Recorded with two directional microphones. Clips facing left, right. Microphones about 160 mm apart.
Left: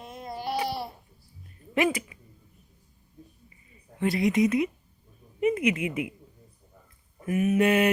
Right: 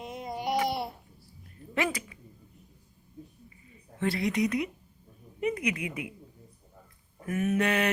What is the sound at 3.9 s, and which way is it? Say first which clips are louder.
A woman's voice: left 4 dB; 20° left (ahead or behind).